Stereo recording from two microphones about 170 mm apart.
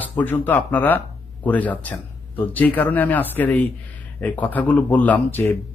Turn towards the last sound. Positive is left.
turn(degrees=10)  # may be behind; listen again after turning